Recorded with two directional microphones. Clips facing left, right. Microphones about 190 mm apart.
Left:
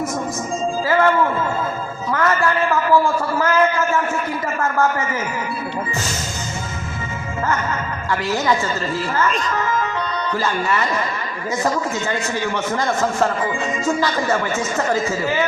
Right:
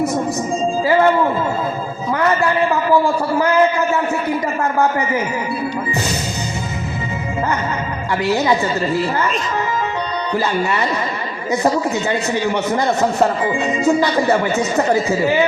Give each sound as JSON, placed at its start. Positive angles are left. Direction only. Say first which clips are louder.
{"t": 0.9, "sound": "a man's voice", "louder": "right 3 dB", "side_deg": -20}
{"t": 8.2, "sound": "a man's voice", "louder": "right 4 dB", "side_deg": -15}
{"t": 10.3, "sound": "a man's voice", "louder": "right 3 dB", "side_deg": -15}